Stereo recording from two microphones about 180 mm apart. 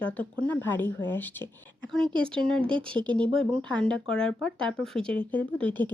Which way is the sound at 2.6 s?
25° right (ahead or behind).